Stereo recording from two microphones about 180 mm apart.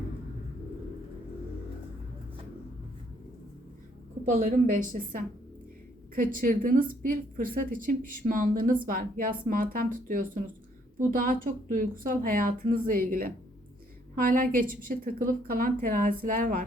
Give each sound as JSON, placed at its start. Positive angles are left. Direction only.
{"t": 4.3, "sound": "a woman's voice", "side_deg": -45}